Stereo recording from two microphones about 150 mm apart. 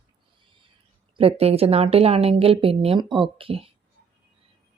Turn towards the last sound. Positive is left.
turn(degrees=-40)  # may be behind; listen again after turning